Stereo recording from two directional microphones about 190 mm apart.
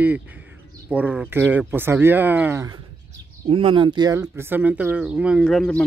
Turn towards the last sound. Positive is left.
turn(degrees=0)  # may be behind; listen again after turning